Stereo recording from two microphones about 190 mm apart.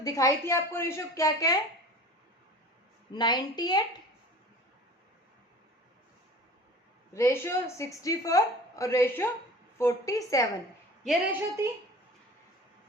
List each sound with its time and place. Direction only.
0.0 s a woman's voice: 15° left (ahead or behind)
3.1 s a woman's voice: 20° left (ahead or behind)
7.1 s a woman's voice: 15° left (ahead or behind)
11.0 s a woman's voice: centre (ahead or behind)
11.3 s a woman's voice: 15° right (ahead or behind)